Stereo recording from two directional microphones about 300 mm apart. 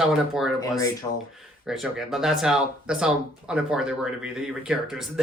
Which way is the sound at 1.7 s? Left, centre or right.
Centre.